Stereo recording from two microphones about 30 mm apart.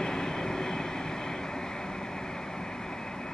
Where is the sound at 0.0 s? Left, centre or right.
Left.